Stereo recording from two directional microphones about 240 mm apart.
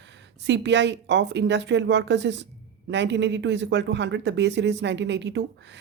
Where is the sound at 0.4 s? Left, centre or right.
Right.